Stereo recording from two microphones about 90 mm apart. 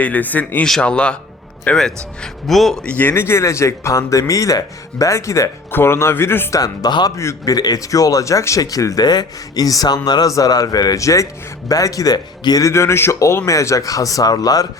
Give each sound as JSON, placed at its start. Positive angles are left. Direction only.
{"t": 0.0, "sound": "a man's voice", "side_deg": 20}
{"t": 2.2, "sound": "speech", "side_deg": 0}
{"t": 2.9, "sound": "speech", "side_deg": 20}
{"t": 6.5, "sound": "speech", "side_deg": 45}
{"t": 7.2, "sound": "speech", "side_deg": 35}
{"t": 7.5, "sound": "speech", "side_deg": 45}